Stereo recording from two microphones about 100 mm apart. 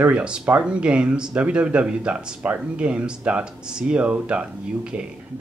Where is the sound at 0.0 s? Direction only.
10° right (ahead or behind).